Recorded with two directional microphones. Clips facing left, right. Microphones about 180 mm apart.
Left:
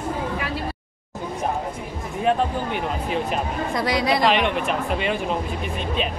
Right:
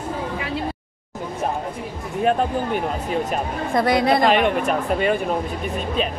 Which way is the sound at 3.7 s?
55° right (ahead or behind).